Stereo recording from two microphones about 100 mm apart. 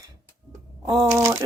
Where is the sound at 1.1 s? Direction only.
30° right (ahead or behind).